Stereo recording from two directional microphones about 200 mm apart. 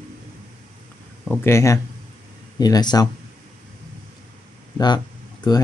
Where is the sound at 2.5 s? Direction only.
20° left (ahead or behind).